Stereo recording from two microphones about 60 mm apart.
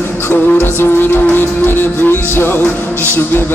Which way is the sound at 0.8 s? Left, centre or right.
Left.